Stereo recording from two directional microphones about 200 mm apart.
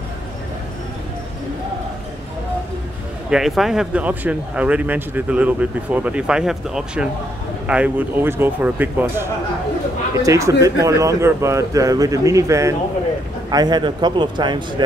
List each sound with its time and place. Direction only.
3.3 s a man's voice: centre (ahead or behind); by 14.6 s 20° right (ahead or behind)